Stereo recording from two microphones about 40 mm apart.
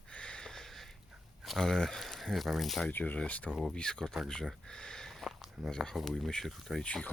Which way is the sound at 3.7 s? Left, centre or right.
Left.